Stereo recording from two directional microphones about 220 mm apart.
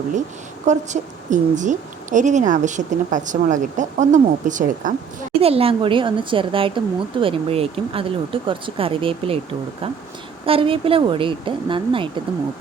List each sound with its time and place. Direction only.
0.6 s a woman's voice: 35° right (ahead or behind)